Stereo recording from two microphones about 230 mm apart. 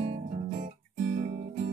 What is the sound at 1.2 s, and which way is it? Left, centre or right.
Music, right.